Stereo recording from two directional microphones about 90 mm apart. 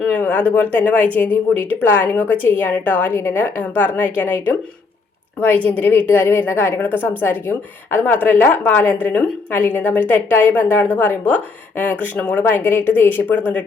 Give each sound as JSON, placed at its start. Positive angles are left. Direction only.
{"t": 0.1, "sound": "a woman's voice", "side_deg": 20}